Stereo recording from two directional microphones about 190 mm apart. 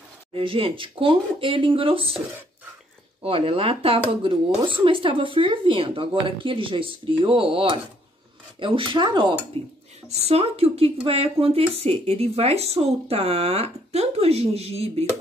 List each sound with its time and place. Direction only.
0.3 s speech: 30° right (ahead or behind)